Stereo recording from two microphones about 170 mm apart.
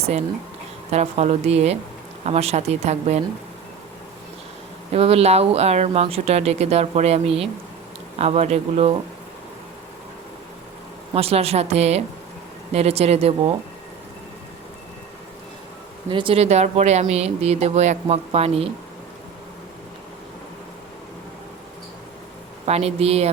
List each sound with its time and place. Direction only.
0.9 s speech: 40° right (ahead or behind)
4.9 s speech: 35° right (ahead or behind)
11.1 s speech: 35° right (ahead or behind)
16.0 s speech: 30° right (ahead or behind)
22.6 s speech: 40° right (ahead or behind)